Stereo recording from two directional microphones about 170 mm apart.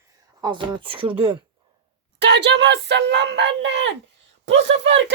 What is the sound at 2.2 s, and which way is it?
Speech, 85° right.